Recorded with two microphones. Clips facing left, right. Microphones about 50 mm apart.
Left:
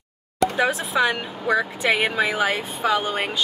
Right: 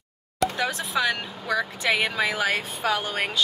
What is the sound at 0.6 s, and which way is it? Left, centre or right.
Speech, centre.